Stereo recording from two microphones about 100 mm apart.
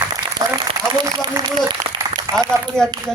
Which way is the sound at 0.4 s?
40° right (ahead or behind).